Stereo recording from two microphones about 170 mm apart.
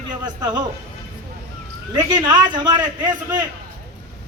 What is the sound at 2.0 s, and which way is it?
Speech, 25° right (ahead or behind).